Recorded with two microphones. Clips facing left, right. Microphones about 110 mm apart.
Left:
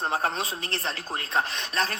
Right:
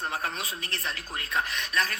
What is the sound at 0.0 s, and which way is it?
Speech, 30° left (ahead or behind).